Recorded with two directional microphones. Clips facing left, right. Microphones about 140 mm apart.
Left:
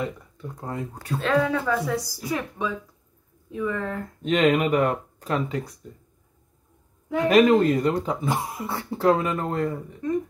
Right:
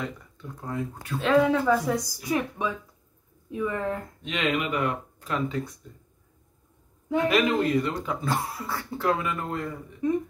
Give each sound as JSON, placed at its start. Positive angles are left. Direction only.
{"t": 0.0, "sound": "speech", "side_deg": 25}
{"t": 1.2, "sound": "speech", "side_deg": -10}
{"t": 4.2, "sound": "speech", "side_deg": 45}
{"t": 7.2, "sound": "speech", "side_deg": 40}
{"t": 8.2, "sound": "speech", "side_deg": 20}
{"t": 10.0, "sound": "speech", "side_deg": -10}